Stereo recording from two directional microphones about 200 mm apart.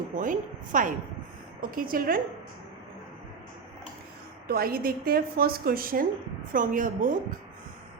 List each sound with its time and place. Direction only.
0.2 s a woman's voice: 40° right (ahead or behind)
4.4 s a woman's voice: 50° right (ahead or behind)